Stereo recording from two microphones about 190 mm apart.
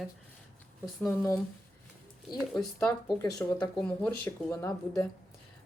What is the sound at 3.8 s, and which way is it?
Speech, 5° left (ahead or behind).